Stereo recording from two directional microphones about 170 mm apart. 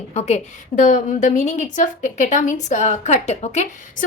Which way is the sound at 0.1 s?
40° left (ahead or behind).